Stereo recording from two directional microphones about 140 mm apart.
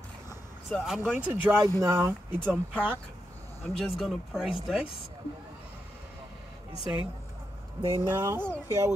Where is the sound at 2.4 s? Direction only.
10° left (ahead or behind).